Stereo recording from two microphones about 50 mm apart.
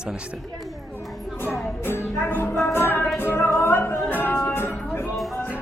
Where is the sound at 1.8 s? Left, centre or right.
Left.